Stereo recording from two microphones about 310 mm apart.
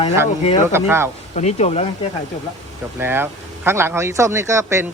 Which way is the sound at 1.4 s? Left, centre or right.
Left.